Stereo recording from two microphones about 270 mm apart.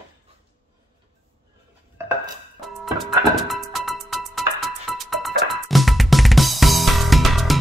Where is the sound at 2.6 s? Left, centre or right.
Centre.